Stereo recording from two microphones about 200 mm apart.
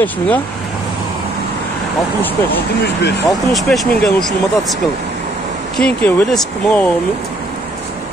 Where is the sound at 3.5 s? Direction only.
Centre (ahead or behind).